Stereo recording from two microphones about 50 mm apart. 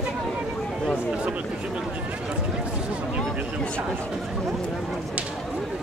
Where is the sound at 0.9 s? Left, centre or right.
Right.